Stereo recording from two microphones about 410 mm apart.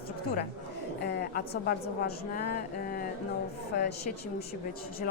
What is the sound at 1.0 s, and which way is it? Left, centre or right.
A woman's voice, left.